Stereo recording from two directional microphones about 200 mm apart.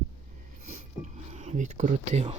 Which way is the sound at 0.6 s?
35° right (ahead or behind).